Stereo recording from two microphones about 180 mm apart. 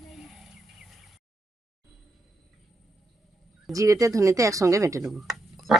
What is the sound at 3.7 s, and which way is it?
Speech, 20° right (ahead or behind).